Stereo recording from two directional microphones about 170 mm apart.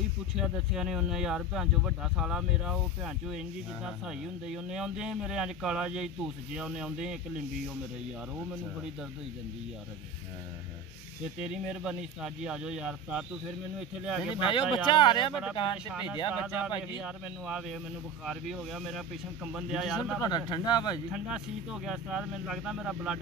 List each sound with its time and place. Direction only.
0.4 s speech: centre (ahead or behind)
11.3 s speech: 5° right (ahead or behind)
14.3 s speech: 30° left (ahead or behind)
15.9 s speech: 5° right (ahead or behind)
20.2 s speech: 25° left (ahead or behind)
21.8 s speech: 5° right (ahead or behind)